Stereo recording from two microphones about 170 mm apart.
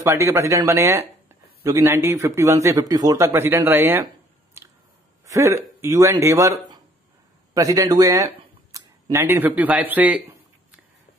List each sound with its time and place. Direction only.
0.0 s speech: 15° right (ahead or behind)
4.6 s squish: 15° right (ahead or behind)
5.2 s throat clearing: 15° right (ahead or behind)
5.8 s speech: 15° right (ahead or behind)